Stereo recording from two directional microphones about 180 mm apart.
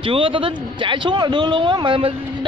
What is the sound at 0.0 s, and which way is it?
A man's voice, 30° right (ahead or behind).